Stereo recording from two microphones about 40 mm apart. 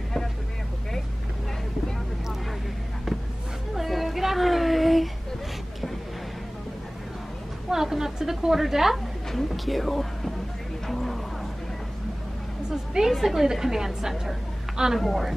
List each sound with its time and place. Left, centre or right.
3.7 s a sound: centre
7.7 s a woman's voice: centre
9.3 s speech: centre
10.9 s a sound: centre
12.7 s a woman's voice: centre
15.0 s a woman's voice: centre